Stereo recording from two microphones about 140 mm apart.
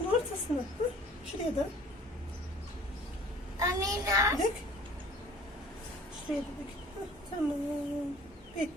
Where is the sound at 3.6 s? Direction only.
25° right (ahead or behind).